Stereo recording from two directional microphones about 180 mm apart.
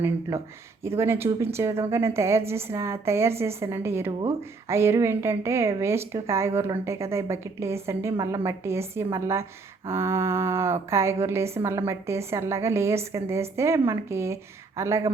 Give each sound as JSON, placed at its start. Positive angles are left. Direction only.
{"t": 0.0, "sound": "speech", "side_deg": -15}